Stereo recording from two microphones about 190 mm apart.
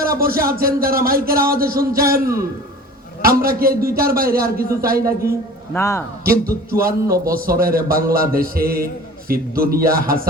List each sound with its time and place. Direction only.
0.2 s a man's voice: 50° right (ahead or behind)
3.2 s a man's voice: 50° right (ahead or behind)
5.7 s a man's voice: 15° left (ahead or behind)
6.2 s a man's voice: 50° right (ahead or behind)